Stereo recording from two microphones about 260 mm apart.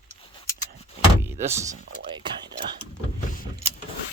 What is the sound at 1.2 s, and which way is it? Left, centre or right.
Music, centre.